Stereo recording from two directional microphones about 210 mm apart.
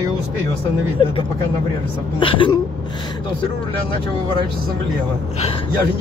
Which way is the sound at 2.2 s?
25° left (ahead or behind).